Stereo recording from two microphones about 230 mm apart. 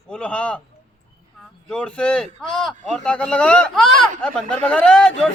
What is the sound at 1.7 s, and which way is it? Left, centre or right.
Speech, centre.